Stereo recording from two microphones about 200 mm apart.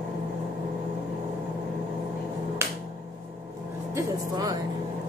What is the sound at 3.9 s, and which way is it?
Music, 20° right (ahead or behind).